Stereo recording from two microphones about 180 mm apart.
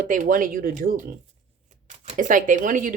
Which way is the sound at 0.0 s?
45° right (ahead or behind).